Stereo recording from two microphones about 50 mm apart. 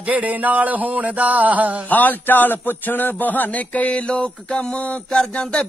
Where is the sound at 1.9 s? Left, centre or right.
Left.